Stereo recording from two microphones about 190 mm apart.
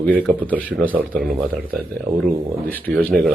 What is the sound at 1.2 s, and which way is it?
Speech, 50° right (ahead or behind).